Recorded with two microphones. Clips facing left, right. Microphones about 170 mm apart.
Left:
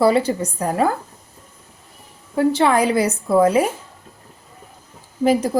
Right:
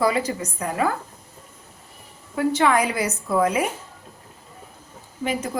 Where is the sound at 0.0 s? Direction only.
30° left (ahead or behind).